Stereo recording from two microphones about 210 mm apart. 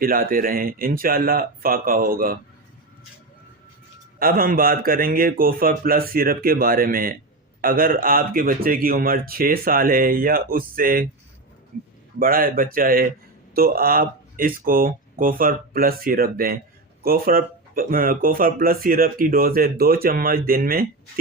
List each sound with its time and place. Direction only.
0.0 s speech: 45° right (ahead or behind)
4.2 s speech: 45° right (ahead or behind)
12.2 s speech: 45° right (ahead or behind)